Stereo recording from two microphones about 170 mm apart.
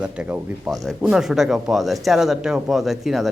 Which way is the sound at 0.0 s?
5° right (ahead or behind).